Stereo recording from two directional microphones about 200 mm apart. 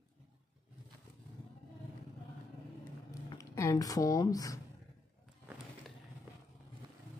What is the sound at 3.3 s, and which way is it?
Speech, 15° left (ahead or behind).